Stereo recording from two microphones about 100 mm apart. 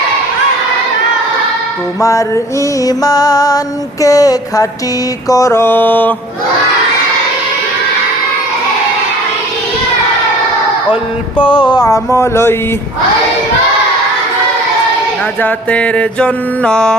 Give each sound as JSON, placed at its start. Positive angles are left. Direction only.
{"t": 2.0, "sound": "music", "side_deg": 30}
{"t": 5.3, "sound": "mantra", "side_deg": 30}
{"t": 11.3, "sound": "music", "side_deg": 55}
{"t": 11.8, "sound": "mantra", "side_deg": 30}
{"t": 15.4, "sound": "mantra", "side_deg": 15}